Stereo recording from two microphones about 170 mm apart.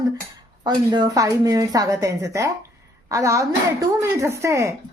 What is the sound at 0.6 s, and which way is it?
A woman's voice, 25° right (ahead or behind).